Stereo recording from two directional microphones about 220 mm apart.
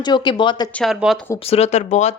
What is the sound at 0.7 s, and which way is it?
Speech, centre (ahead or behind).